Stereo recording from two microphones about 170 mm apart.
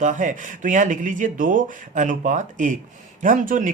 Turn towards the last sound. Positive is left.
turn(degrees=-50)  # may be behind; listen again after turning